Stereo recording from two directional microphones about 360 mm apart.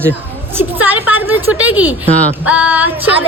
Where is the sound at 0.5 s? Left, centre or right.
Centre.